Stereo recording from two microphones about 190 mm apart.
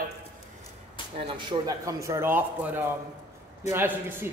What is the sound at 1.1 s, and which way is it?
A man's voice, 25° right (ahead or behind).